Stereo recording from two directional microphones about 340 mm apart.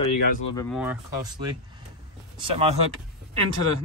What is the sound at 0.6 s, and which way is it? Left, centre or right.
Speech, centre.